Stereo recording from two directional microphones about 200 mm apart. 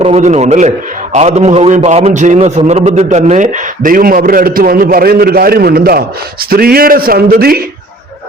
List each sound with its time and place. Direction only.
0.0 s a man's voice: 35° right (ahead or behind)